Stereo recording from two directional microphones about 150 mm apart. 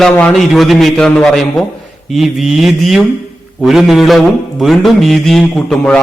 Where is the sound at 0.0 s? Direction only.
5° left (ahead or behind).